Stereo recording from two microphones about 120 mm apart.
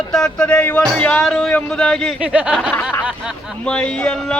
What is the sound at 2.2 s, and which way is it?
Speech, 10° right (ahead or behind).